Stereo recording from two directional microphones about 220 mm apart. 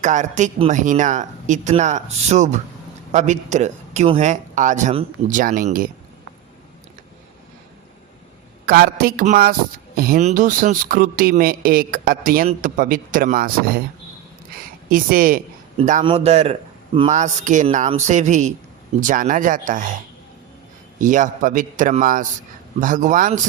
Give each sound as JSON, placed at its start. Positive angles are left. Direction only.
{"t": 0.0, "sound": "speech", "side_deg": -35}
{"t": 8.6, "sound": "speech", "side_deg": -40}
{"t": 14.8, "sound": "speech", "side_deg": -40}
{"t": 21.0, "sound": "speech", "side_deg": -35}